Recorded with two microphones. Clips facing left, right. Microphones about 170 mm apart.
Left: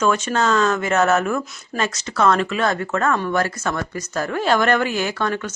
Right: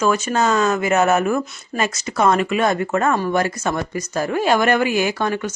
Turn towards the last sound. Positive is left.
turn(degrees=-10)  # may be behind; listen again after turning